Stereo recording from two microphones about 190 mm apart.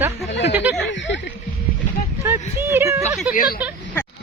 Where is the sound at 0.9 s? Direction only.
70° left (ahead or behind).